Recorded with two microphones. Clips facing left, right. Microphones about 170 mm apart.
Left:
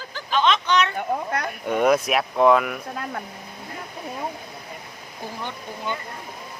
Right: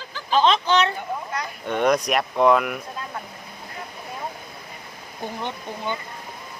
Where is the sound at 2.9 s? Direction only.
60° left (ahead or behind).